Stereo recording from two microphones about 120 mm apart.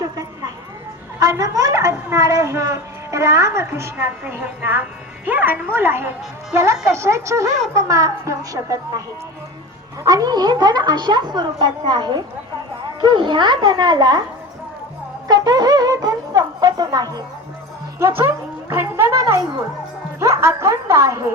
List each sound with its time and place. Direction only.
1.2 s a woman's voice: 30° right (ahead or behind)
15.3 s wind instrument: 35° right (ahead or behind)
18.7 s music: 20° right (ahead or behind)
20.1 s a woman's voice: 20° right (ahead or behind)